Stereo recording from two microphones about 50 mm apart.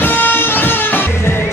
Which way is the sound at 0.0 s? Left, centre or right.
Left.